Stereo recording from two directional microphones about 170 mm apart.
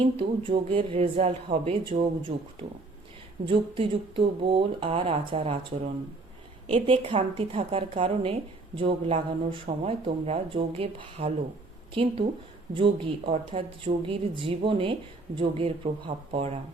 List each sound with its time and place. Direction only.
0.0 s speech: 30° right (ahead or behind)